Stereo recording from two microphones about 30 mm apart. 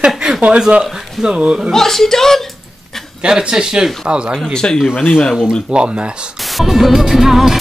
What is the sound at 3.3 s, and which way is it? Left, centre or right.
Speech, right.